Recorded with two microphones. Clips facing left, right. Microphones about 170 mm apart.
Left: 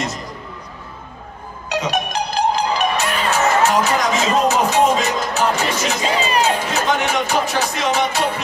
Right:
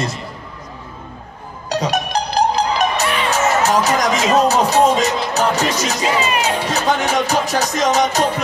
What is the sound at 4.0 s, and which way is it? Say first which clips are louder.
Music: right 2 dB; 40° right (ahead or behind).